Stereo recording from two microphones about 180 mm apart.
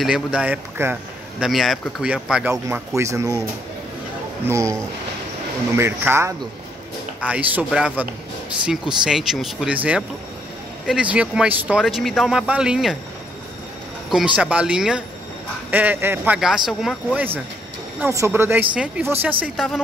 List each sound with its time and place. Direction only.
0.0 s speech: 5° right (ahead or behind)
1.4 s speech: centre (ahead or behind)
3.0 s speech: 15° right (ahead or behind)
4.5 s speech: 15° right (ahead or behind)
5.8 s speech: 15° right (ahead or behind)
14.1 s speech: 5° right (ahead or behind)